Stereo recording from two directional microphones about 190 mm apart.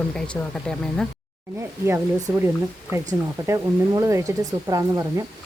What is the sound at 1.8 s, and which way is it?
Speech, 15° right (ahead or behind).